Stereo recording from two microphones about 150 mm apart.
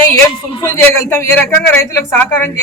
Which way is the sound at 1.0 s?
15° left (ahead or behind).